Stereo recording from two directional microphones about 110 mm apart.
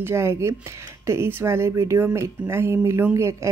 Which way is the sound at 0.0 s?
25° right (ahead or behind).